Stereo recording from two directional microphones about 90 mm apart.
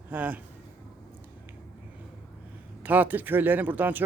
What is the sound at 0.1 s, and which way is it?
Speech, 20° right (ahead or behind).